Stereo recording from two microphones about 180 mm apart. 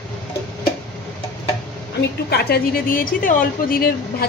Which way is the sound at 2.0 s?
65° left (ahead or behind).